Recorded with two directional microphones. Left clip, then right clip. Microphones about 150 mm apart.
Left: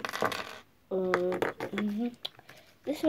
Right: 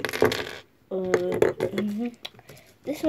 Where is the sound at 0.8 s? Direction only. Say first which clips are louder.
Right 4 dB; 5° left (ahead or behind).